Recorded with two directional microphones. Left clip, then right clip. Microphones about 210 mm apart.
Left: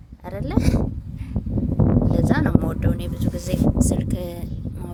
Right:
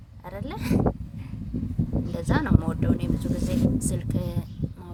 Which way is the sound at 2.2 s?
25° left (ahead or behind).